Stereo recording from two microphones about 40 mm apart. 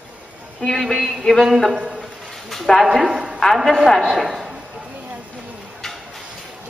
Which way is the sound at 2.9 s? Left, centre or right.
Centre.